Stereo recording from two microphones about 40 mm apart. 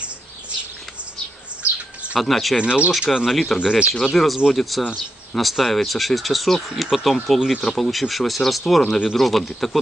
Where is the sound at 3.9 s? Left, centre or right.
Centre.